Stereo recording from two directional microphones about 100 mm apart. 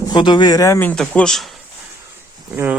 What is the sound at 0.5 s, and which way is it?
Speech, 30° left (ahead or behind).